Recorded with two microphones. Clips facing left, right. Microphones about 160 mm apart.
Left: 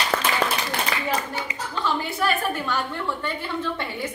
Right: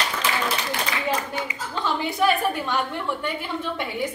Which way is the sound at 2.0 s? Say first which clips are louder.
Right 3 dB; 15° right (ahead or behind).